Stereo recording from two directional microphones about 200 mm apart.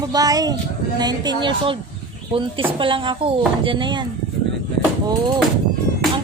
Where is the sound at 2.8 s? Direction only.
25° right (ahead or behind).